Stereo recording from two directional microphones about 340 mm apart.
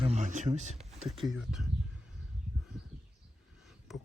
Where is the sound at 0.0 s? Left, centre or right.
Centre.